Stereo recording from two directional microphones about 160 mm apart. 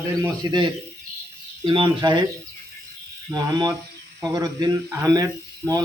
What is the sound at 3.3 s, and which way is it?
A man's voice, 25° right (ahead or behind).